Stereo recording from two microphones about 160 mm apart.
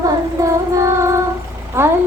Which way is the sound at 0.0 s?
20° right (ahead or behind).